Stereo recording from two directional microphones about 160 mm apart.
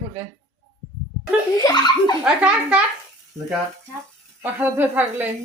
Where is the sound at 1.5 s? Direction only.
25° left (ahead or behind).